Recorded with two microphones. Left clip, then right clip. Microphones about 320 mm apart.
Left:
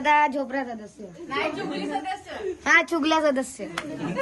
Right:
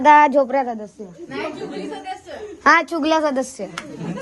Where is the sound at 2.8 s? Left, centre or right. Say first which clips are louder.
Right 3 dB; centre.